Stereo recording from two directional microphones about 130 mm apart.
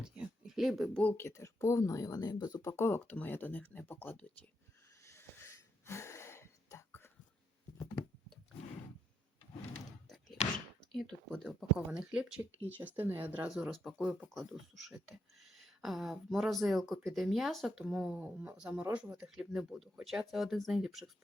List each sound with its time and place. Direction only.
0.0 s a sound: 5° right (ahead or behind)
1.0 s speech: 20° left (ahead or behind)
5.0 s wheeze: 20° left (ahead or behind)
10.9 s speech: 5° left (ahead or behind)
11.9 s speech: 10° right (ahead or behind)